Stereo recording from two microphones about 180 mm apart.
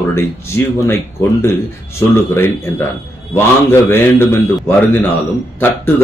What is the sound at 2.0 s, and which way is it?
Speech, 15° left (ahead or behind).